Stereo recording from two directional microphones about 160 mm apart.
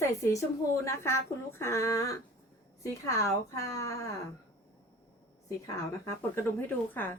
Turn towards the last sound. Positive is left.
turn(degrees=10)  # may be behind; listen again after turning